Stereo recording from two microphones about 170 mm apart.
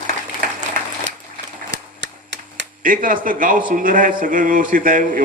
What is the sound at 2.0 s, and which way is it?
Cap gun, 90° right.